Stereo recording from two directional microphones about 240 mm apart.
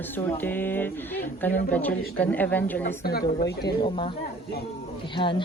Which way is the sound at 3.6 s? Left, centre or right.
Centre.